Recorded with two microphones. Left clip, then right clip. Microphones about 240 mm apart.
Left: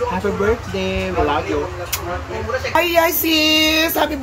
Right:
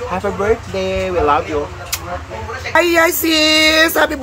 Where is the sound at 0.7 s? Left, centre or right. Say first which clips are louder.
Right 3 dB; centre.